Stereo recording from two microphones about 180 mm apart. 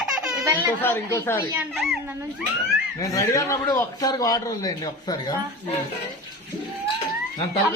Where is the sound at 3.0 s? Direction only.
20° left (ahead or behind).